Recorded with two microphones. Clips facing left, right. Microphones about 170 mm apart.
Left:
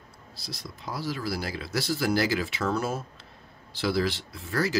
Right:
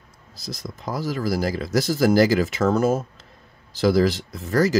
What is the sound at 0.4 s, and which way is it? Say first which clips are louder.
Speech: right 7 dB; 45° right (ahead or behind).